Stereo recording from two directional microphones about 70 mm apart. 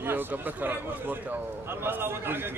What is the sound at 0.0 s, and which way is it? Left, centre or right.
A man's voice, right.